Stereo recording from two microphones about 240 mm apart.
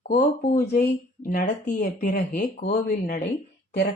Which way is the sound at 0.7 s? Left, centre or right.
Left.